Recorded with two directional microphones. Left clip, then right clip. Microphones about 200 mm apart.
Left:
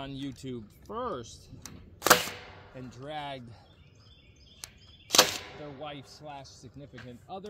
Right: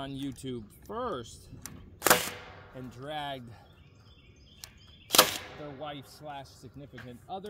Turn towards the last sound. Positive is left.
turn(degrees=-5)  # may be behind; listen again after turning